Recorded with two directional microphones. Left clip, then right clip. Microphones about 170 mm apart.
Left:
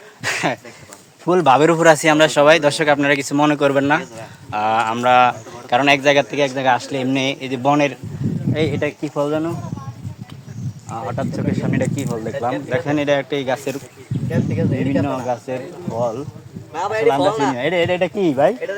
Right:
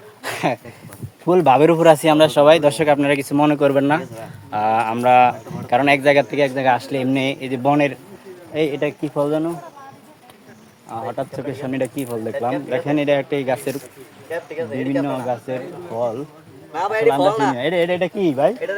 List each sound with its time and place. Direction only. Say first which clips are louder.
0.2 s a sound: left 2 dB; 5° left (ahead or behind)
1.2 s speech: even; centre (ahead or behind)
10.8 s speech: even; 15° left (ahead or behind)
14.3 s speech: left 3 dB; 60° left (ahead or behind)
15.3 s speech: left 1 dB; 35° left (ahead or behind)
16.7 s speech: even; 55° left (ahead or behind)
17.5 s speech: left 1 dB; 30° left (ahead or behind); by 18.8 s 55° left (ahead or behind)